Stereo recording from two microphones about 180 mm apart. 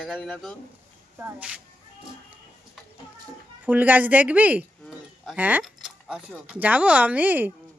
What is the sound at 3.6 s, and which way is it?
A woman's voice, 10° right (ahead or behind).